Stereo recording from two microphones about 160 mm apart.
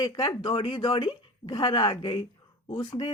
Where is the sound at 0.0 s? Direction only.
25° left (ahead or behind).